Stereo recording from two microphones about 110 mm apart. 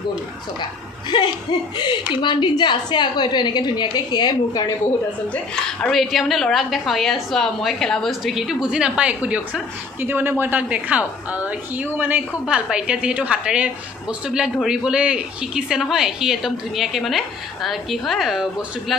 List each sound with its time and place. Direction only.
1.1 s a woman's voice: 45° left (ahead or behind)
5.9 s a woman's voice: centre (ahead or behind)